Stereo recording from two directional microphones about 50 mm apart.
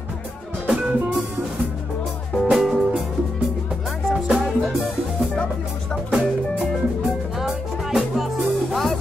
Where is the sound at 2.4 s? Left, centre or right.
Centre.